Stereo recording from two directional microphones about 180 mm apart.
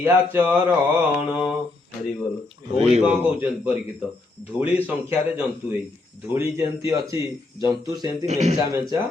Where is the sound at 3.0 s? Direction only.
10° right (ahead or behind).